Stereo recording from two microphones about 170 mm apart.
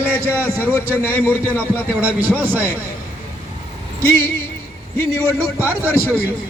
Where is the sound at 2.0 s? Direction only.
10° right (ahead or behind).